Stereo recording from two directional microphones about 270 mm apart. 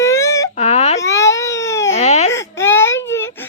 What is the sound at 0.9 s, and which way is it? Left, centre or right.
Baby cry, centre.